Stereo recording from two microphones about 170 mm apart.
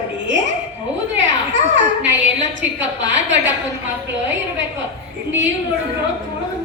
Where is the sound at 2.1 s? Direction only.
90° right.